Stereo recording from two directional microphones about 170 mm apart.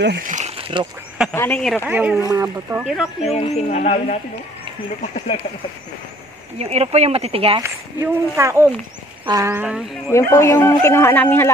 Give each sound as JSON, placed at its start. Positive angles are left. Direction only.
{"t": 0.2, "sound": "speech", "side_deg": -45}
{"t": 1.3, "sound": "speech", "side_deg": 10}
{"t": 1.9, "sound": "speech", "side_deg": -10}
{"t": 2.8, "sound": "speech", "side_deg": 0}
{"t": 3.3, "sound": "speech", "side_deg": 40}
{"t": 6.6, "sound": "speech", "side_deg": -40}
{"t": 7.6, "sound": "speech", "side_deg": -15}
{"t": 10.1, "sound": "speech", "side_deg": 15}